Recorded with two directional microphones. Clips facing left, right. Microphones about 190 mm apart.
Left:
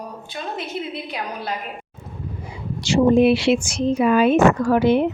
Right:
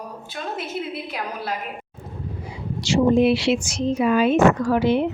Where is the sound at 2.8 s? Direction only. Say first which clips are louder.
Left 2 dB; 55° left (ahead or behind).